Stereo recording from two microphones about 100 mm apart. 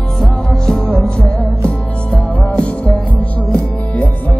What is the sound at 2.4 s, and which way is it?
Music, 10° left (ahead or behind).